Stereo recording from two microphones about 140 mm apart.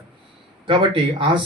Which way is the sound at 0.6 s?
40° right (ahead or behind).